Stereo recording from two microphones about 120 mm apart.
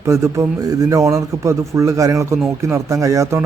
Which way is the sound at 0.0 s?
25° right (ahead or behind).